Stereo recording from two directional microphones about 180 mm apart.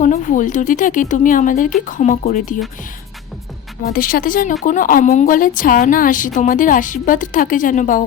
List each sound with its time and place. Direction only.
0.0 s a woman's voice: 45° left (ahead or behind)
3.8 s a woman's voice: 50° left (ahead or behind)